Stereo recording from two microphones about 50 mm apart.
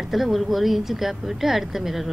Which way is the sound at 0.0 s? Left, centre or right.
Centre.